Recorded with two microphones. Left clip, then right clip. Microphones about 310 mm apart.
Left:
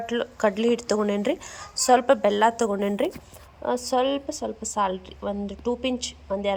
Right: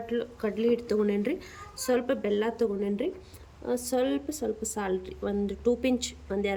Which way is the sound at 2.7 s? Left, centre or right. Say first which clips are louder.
Left 5 dB; left.